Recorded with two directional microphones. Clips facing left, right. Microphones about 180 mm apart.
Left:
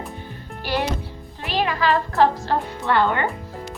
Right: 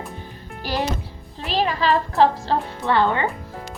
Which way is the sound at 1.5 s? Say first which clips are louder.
Right 1 dB; 30° right (ahead or behind).